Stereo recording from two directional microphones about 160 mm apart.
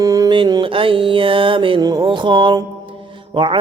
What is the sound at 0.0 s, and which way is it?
Mantra, 20° right (ahead or behind).